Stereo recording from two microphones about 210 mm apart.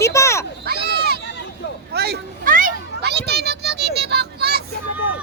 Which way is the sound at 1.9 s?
50° right (ahead or behind).